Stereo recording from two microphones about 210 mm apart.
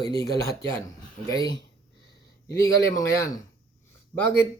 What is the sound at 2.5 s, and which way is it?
Speech, 15° left (ahead or behind).